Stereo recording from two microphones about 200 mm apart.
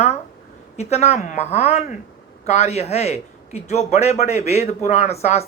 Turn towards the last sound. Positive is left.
turn(degrees=30)  # may be behind; listen again after turning